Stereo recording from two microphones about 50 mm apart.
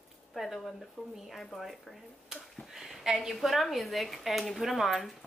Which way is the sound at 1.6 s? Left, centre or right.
Centre.